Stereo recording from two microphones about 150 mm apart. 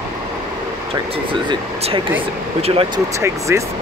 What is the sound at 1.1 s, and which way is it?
Speech, 40° right (ahead or behind).